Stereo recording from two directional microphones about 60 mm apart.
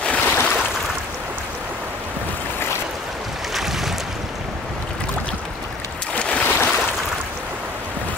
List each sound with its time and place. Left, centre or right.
0.0 s a sound: centre
3.5 s boat: centre
6.1 s boat: left